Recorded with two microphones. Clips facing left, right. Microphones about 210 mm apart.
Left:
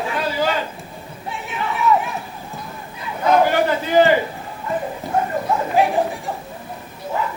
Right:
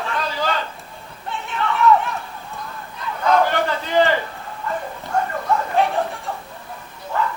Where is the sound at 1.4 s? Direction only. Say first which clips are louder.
Right 3 dB; 5° left (ahead or behind).